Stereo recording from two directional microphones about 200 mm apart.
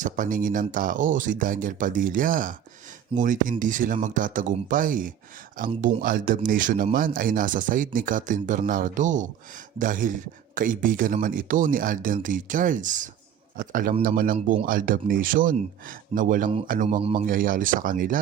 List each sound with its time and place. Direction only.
0.0 s speech: 40° right (ahead or behind)
17.0 s speech: 30° right (ahead or behind)
17.2 s speech: 45° right (ahead or behind)